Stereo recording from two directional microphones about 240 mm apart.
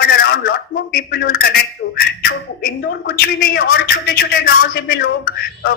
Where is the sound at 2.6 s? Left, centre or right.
Left.